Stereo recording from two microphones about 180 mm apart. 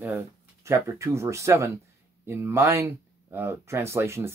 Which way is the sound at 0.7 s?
15° right (ahead or behind).